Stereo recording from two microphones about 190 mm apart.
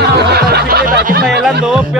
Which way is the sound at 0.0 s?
60° right (ahead or behind).